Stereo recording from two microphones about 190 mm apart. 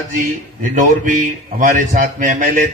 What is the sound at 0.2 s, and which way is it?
A man's voice, 45° right (ahead or behind).